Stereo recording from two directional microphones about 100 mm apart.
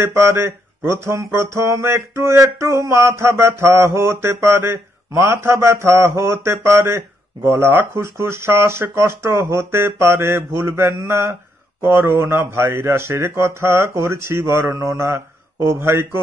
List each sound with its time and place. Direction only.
0.0 s speech: 30° right (ahead or behind)
14.8 s mantra: 30° right (ahead or behind)